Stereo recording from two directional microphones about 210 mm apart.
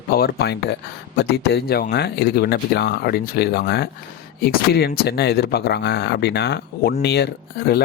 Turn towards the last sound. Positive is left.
turn(degrees=50)  # may be behind; listen again after turning